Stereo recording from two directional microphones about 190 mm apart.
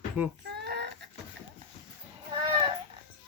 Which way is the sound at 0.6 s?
60° right (ahead or behind).